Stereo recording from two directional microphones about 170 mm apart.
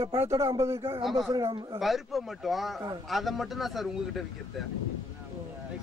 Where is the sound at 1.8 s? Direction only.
Centre (ahead or behind).